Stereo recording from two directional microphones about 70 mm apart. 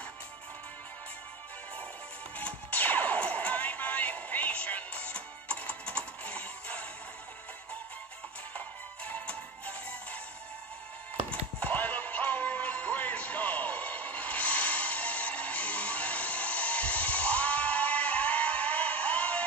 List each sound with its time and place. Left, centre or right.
2.3 s music: left
8.5 s music: left
11.2 s music: left